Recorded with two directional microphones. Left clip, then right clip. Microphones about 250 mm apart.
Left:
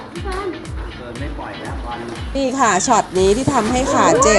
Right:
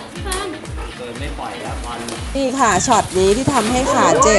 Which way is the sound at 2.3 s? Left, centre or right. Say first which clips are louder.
Even; centre.